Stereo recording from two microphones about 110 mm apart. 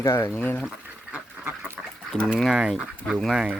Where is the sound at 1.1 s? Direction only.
20° right (ahead or behind).